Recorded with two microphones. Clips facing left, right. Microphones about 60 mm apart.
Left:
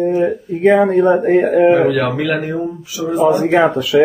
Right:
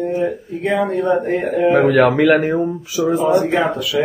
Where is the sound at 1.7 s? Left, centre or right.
Right.